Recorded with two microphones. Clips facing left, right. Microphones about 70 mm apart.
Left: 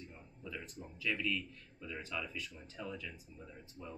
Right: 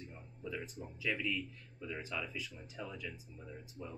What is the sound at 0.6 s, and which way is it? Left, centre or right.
Speech, centre.